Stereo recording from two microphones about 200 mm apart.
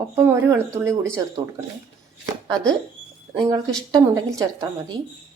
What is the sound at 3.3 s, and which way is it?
A woman's voice, 15° right (ahead or behind).